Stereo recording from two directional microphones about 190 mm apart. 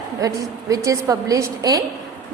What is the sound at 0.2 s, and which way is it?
A woman's voice, 15° right (ahead or behind).